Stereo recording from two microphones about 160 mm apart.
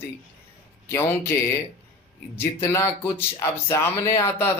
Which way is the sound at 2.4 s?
20° left (ahead or behind).